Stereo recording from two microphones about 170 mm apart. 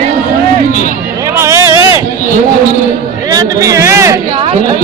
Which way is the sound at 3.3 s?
20° right (ahead or behind).